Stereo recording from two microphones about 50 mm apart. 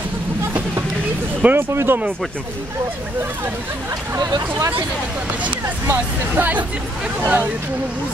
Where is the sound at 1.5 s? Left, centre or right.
Right.